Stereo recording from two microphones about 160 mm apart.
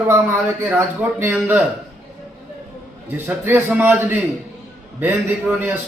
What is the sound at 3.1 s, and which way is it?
A man's voice, 15° right (ahead or behind).